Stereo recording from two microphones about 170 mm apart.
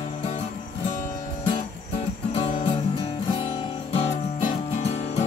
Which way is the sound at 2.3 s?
30° left (ahead or behind).